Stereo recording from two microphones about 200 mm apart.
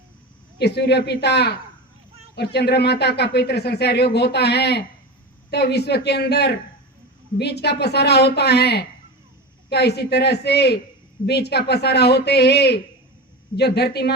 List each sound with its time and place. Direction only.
0.6 s speech: 55° left (ahead or behind)